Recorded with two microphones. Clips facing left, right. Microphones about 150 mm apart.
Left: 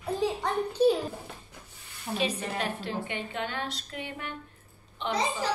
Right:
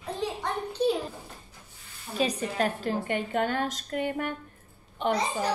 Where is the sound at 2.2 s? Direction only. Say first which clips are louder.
Right 4 dB; 40° right (ahead or behind).